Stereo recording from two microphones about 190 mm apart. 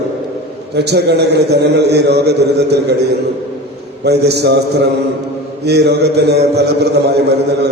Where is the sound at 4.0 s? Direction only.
60° right (ahead or behind).